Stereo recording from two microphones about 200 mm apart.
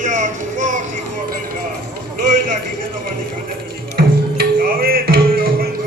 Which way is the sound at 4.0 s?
50° right (ahead or behind).